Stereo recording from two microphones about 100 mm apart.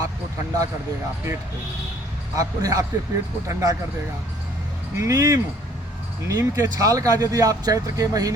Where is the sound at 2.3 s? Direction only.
35° right (ahead or behind).